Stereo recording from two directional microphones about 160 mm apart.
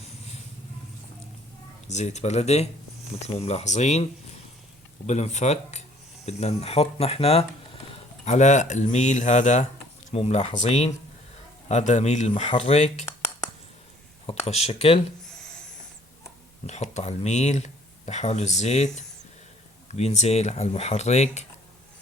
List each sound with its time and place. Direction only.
1.9 s speech: 45° left (ahead or behind)
12.3 s speech: 35° left (ahead or behind)
14.3 s speech: 40° left (ahead or behind)
15.2 s a sound: 5° left (ahead or behind)
16.6 s speech: 45° left (ahead or behind)
19.9 s speech: 45° left (ahead or behind)